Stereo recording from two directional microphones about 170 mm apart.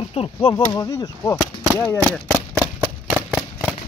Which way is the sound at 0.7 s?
20° left (ahead or behind).